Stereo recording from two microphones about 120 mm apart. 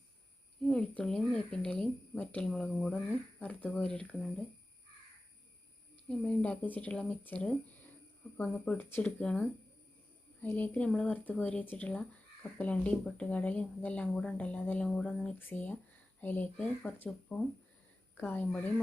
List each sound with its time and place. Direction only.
0.7 s speech: 5° left (ahead or behind)
6.1 s speech: 10° left (ahead or behind)
8.5 s a woman's voice: 15° left (ahead or behind)